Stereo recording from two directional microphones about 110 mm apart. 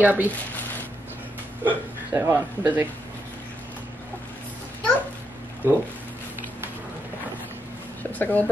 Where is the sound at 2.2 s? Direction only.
20° right (ahead or behind).